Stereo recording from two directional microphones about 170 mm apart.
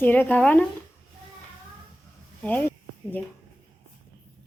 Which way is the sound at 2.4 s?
10° left (ahead or behind).